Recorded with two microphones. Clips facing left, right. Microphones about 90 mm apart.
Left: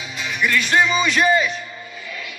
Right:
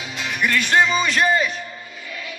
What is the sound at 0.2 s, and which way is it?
Music, 55° right (ahead or behind).